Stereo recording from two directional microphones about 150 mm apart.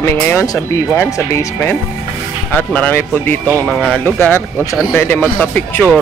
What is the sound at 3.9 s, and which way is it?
Speech, 10° left (ahead or behind).